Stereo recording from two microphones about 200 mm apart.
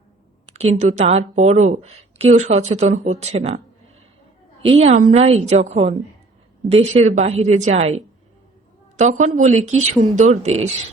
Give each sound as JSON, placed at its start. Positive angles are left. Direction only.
{"t": 0.8, "sound": "a woman's voice", "side_deg": -35}
{"t": 4.8, "sound": "a woman's voice", "side_deg": -40}
{"t": 5.1, "sound": "a woman's voice", "side_deg": -30}